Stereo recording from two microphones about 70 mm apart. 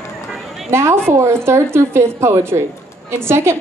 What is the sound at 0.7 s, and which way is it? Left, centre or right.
A woman's voice, right.